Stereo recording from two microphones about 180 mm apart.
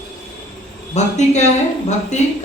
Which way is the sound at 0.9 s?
40° left (ahead or behind).